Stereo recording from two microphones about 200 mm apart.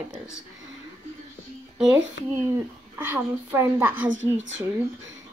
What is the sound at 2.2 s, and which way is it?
Speech, 65° left (ahead or behind).